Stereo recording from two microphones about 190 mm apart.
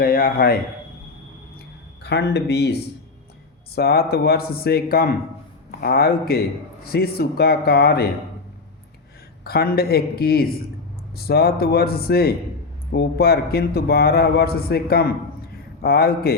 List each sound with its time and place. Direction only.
0.0 s speech: 50° left (ahead or behind)
2.0 s a man's voice: 60° left (ahead or behind)
3.8 s speech: 55° left (ahead or behind)
9.4 s a man's voice: 55° left (ahead or behind)